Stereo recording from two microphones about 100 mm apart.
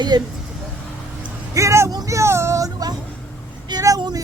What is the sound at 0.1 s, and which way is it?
Speech, 45° right (ahead or behind).